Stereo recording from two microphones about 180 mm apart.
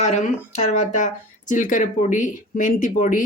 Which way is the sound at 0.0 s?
40° left (ahead or behind).